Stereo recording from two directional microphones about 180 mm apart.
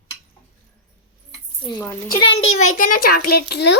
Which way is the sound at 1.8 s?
10° left (ahead or behind).